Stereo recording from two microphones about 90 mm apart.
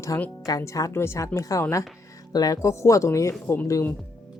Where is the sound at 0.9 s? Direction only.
30° left (ahead or behind).